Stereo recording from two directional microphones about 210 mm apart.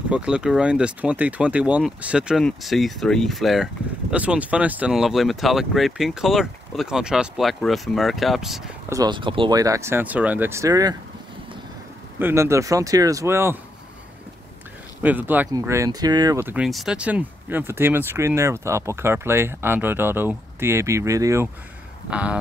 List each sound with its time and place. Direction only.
0.1 s speech: 5° right (ahead or behind)
8.8 s speech: 15° right (ahead or behind)
12.2 s speech: 10° right (ahead or behind)
15.0 s speech: 10° right (ahead or behind)